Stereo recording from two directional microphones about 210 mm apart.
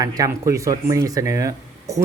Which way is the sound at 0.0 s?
15° right (ahead or behind).